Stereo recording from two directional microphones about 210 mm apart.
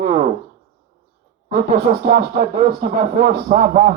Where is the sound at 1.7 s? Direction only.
45° right (ahead or behind).